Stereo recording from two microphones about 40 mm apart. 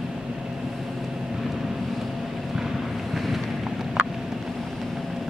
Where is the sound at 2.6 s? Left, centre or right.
Centre.